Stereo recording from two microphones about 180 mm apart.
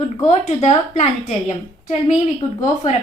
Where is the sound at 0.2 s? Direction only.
40° left (ahead or behind).